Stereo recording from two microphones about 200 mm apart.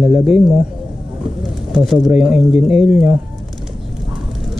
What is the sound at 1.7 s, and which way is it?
Speech, centre (ahead or behind).